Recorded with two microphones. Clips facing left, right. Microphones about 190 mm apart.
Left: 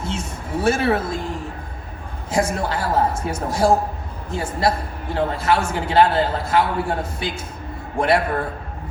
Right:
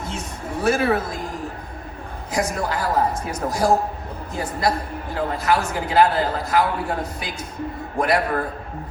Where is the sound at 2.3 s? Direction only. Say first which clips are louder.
Left 2 dB; 30° left (ahead or behind).